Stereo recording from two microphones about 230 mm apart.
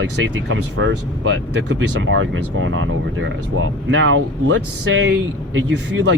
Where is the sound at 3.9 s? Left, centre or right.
Right.